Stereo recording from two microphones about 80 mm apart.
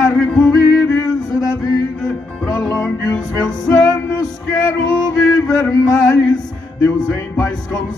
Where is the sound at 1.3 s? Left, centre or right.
Left.